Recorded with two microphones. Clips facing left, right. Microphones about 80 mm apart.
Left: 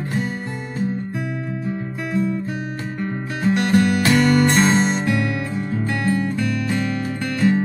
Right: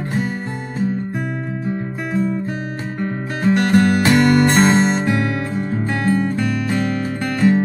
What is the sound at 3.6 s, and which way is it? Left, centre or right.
Music, right.